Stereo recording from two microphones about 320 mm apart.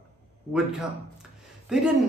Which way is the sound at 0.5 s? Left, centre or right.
Centre.